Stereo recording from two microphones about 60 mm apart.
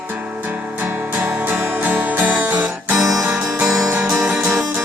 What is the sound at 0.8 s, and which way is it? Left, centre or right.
Music, right.